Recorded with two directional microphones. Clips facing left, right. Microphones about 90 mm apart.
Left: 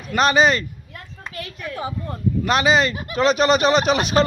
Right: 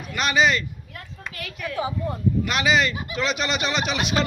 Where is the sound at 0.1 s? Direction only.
40° left (ahead or behind).